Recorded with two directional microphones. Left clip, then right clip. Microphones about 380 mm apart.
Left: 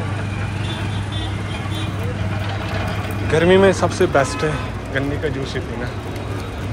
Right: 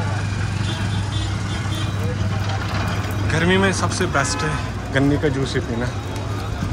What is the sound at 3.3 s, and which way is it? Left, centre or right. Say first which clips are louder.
Speech: left 6 dB; centre.